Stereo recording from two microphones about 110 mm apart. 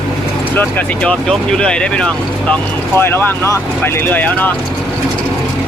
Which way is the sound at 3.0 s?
20° left (ahead or behind).